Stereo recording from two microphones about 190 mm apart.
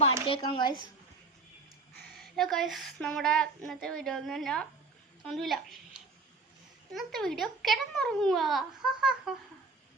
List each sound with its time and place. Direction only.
0.0 s a woman's voice: 30° left (ahead or behind)
2.1 s a child's voice: centre (ahead or behind)